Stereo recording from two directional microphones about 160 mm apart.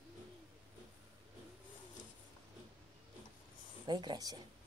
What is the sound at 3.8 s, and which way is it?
Speech, 25° right (ahead or behind).